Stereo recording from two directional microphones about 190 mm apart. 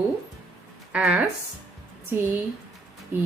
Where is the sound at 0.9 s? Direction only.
5° right (ahead or behind).